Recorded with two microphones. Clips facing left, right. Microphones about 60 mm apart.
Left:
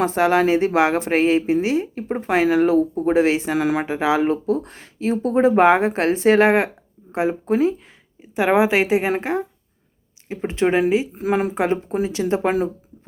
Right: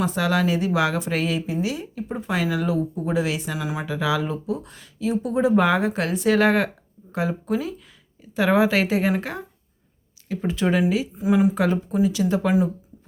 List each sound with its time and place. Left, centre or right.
0.0 s speech: left
3.6 s speech: left
3.8 s speech: left
8.2 s a woman's voice: left
11.1 s speech: left
11.5 s a woman's voice: left